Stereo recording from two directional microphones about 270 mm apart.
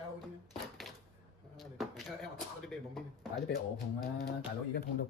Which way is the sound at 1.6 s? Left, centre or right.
Centre.